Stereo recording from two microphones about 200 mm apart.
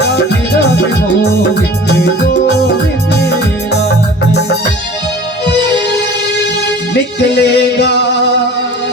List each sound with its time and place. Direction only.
3.2 s music: 55° left (ahead or behind)
7.3 s music: 55° left (ahead or behind)